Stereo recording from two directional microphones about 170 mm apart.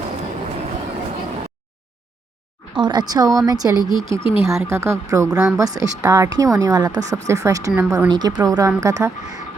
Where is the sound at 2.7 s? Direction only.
25° right (ahead or behind).